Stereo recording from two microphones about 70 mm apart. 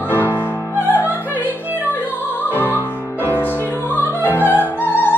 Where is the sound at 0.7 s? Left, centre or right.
Right.